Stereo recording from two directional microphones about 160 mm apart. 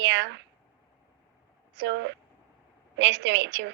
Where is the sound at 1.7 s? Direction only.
90° right.